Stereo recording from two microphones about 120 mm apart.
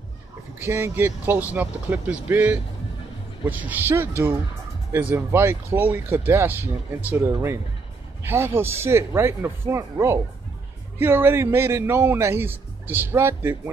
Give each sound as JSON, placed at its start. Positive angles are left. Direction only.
{"t": 0.6, "sound": "speech", "side_deg": -20}
{"t": 5.1, "sound": "speech", "side_deg": -20}